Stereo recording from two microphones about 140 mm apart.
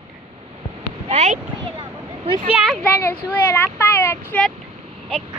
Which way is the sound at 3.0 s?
15° left (ahead or behind).